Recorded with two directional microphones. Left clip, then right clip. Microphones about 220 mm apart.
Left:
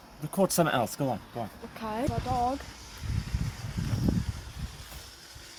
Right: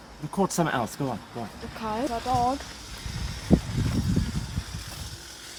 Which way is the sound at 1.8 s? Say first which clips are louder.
Right 4 dB; 5° left (ahead or behind).